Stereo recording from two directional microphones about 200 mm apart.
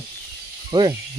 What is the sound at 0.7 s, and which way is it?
Speech, 20° right (ahead or behind).